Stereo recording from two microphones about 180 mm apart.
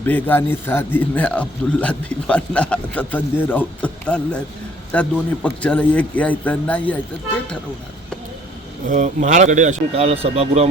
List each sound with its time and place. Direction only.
0.0 s a man's voice: 10° left (ahead or behind)
8.9 s speech: 45° right (ahead or behind)